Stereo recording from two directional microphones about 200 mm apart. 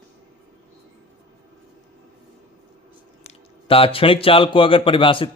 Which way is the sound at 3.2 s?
30° left (ahead or behind).